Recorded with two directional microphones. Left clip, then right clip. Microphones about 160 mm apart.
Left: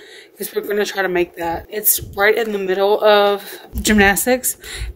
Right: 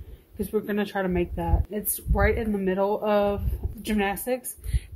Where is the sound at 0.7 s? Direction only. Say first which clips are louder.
Left 13 dB; 40° left (ahead or behind).